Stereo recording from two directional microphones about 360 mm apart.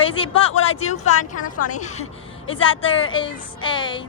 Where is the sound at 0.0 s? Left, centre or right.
Centre.